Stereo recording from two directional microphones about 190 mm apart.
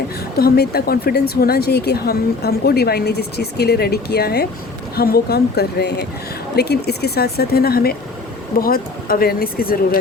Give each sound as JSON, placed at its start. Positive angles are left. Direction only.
{"t": 0.3, "sound": "a woman's voice", "side_deg": 55}